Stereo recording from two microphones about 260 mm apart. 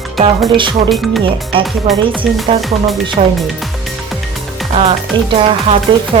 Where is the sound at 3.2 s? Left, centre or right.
Right.